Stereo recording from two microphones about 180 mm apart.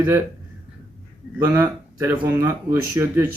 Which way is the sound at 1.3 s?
10° right (ahead or behind).